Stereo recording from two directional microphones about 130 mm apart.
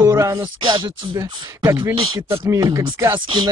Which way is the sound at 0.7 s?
35° right (ahead or behind).